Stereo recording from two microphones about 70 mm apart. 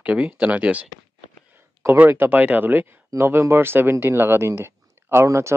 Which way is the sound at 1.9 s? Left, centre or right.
Right.